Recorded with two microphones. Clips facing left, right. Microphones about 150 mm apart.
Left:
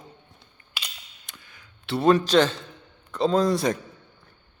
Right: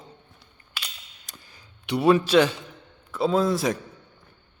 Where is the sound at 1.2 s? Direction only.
40° right (ahead or behind).